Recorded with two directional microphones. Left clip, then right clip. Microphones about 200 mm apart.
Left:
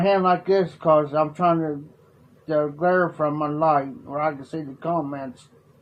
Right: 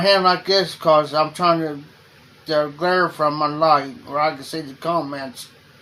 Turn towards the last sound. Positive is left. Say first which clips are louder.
# right 3 dB
turn(degrees=-25)  # may be behind; listen again after turning